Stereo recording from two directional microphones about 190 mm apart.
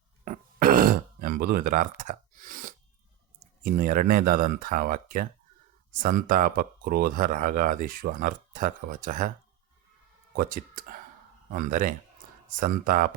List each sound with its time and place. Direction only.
0.3 s throat clearing: 45° right (ahead or behind)
3.6 s speech: 45° right (ahead or behind)
10.3 s speech: 45° right (ahead or behind)